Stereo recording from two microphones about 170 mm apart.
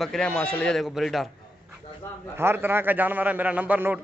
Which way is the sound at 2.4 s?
15° right (ahead or behind).